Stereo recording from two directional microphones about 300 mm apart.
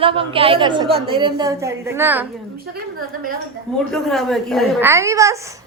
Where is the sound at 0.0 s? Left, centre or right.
Centre.